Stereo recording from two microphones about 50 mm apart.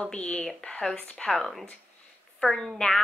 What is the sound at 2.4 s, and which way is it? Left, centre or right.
Speech, centre.